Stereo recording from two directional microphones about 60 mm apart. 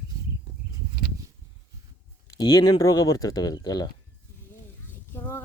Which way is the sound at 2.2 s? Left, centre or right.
Left.